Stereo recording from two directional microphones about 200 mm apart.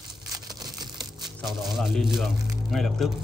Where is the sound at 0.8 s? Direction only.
20° right (ahead or behind).